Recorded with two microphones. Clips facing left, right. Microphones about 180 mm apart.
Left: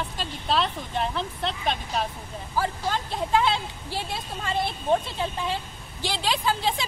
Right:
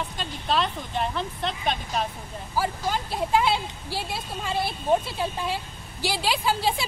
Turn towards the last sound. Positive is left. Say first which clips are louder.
# right 1 dB
turn(degrees=-5)  # may be behind; listen again after turning